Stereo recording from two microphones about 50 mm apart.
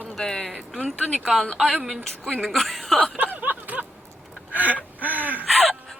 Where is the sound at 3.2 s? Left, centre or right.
Right.